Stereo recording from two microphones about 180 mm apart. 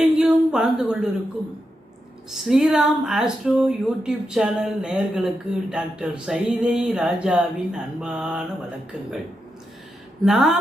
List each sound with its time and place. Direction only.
0.0 s a sound: 5° right (ahead or behind)
2.3 s speech: centre (ahead or behind)
10.2 s speech: centre (ahead or behind)